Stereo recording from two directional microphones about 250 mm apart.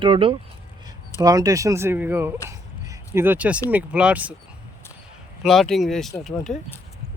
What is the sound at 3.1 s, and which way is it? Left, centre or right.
Speech, centre.